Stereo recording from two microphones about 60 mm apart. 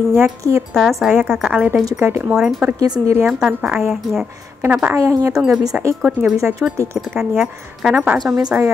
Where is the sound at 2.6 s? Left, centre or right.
Right.